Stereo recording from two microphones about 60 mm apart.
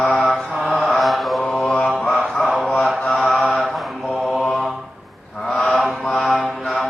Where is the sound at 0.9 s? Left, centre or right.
Centre.